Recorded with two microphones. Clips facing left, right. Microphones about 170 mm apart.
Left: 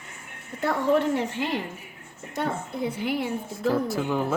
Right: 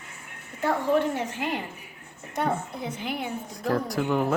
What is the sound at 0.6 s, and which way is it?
Speech, 75° left (ahead or behind).